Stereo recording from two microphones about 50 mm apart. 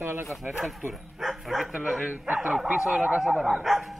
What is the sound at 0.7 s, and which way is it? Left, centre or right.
Speech, centre.